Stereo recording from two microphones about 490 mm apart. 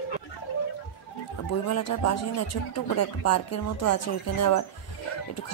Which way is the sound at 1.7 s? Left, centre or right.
Left.